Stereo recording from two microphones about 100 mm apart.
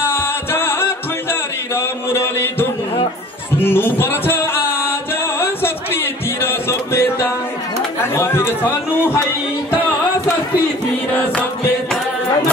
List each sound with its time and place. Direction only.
0.0 s music: 25° left (ahead or behind)
1.8 s a sound: 25° left (ahead or behind)
3.6 s music: 20° left (ahead or behind)
6.4 s music: 25° left (ahead or behind)
8.2 s a sound: 25° left (ahead or behind)
11.1 s music: 15° left (ahead or behind)